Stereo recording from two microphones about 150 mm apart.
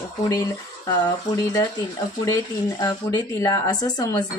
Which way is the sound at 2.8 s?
25° left (ahead or behind).